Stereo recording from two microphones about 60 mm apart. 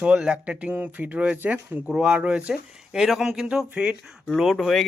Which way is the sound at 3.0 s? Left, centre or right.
Centre.